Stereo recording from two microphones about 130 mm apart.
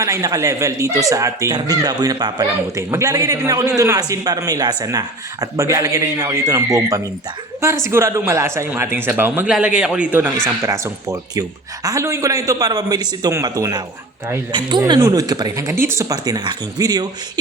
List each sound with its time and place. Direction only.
0.0 s a man's voice: 25° right (ahead or behind)